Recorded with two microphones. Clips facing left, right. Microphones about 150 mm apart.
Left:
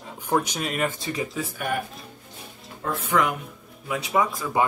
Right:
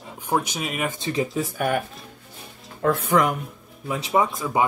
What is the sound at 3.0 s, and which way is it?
Speech, 45° right (ahead or behind).